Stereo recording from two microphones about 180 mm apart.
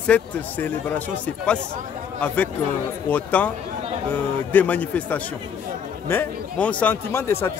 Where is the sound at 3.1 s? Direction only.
10° left (ahead or behind).